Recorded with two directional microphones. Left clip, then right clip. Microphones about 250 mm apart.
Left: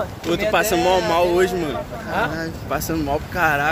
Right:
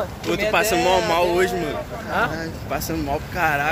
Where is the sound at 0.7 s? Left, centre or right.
Centre.